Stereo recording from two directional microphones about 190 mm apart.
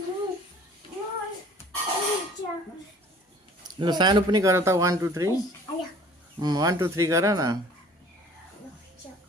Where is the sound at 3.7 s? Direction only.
25° right (ahead or behind).